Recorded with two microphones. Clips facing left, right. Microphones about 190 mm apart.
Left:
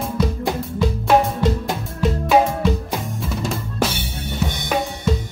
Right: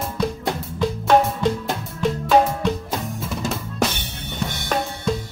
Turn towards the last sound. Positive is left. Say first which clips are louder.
# left 2 dB
turn(degrees=10)  # may be behind; listen again after turning